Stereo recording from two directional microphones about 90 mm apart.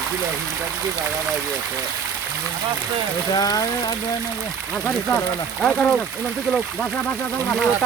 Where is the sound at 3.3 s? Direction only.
45° left (ahead or behind).